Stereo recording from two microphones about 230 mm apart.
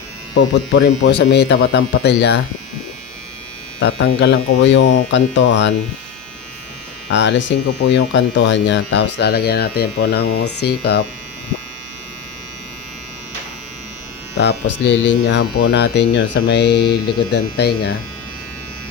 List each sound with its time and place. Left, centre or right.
0.3 s speech: left
3.8 s speech: left
7.1 s speech: left
14.8 s speech: left